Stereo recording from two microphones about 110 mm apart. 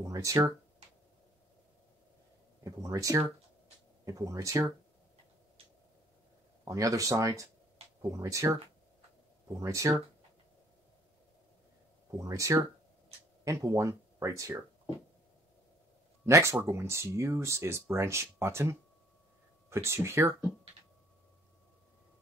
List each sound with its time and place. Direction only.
0.0 s speech: 30° right (ahead or behind)
2.6 s speech: 30° right (ahead or behind)
6.6 s speech: 30° right (ahead or behind)
9.6 s speech: 30° right (ahead or behind)
12.2 s speech: 30° right (ahead or behind)
16.3 s speech: 25° right (ahead or behind)